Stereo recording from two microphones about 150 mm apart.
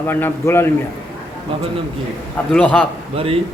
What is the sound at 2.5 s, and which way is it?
Speech, 10° left (ahead or behind).